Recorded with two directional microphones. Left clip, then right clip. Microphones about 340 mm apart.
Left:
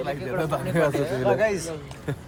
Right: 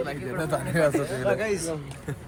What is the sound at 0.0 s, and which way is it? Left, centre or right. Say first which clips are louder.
Speech: left 3 dB; centre.